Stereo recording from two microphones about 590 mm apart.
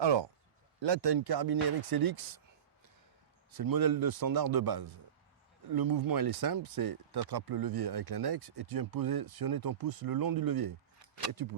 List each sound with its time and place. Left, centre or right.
0.0 s speech: right
3.6 s speech: right